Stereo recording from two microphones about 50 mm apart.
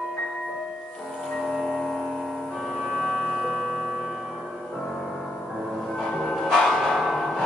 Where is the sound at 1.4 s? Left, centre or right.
Centre.